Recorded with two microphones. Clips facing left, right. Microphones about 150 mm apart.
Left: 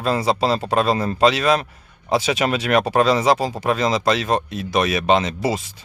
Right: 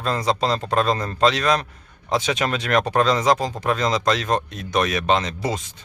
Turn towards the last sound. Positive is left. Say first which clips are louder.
# left 3 dB
turn(degrees=5)  # may be behind; listen again after turning